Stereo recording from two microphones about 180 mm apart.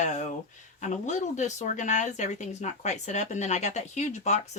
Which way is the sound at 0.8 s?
40° left (ahead or behind).